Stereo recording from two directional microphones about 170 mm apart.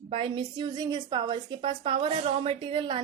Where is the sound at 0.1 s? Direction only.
30° right (ahead or behind).